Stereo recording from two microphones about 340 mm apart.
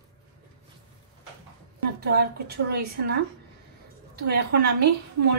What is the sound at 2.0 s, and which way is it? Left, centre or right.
A woman's voice, right.